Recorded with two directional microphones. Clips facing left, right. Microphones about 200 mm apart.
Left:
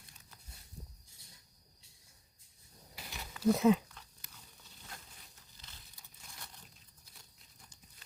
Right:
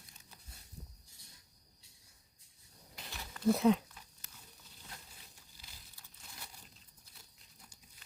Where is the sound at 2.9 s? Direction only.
5° left (ahead or behind).